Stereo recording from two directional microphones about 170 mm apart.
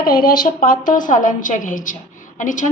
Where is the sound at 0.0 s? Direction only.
60° left (ahead or behind).